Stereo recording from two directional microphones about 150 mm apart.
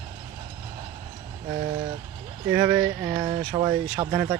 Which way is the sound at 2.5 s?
20° right (ahead or behind).